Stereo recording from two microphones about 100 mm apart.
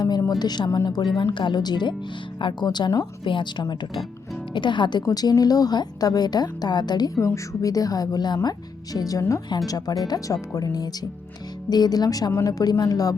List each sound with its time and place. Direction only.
0.2 s a woman's voice: 40° left (ahead or behind)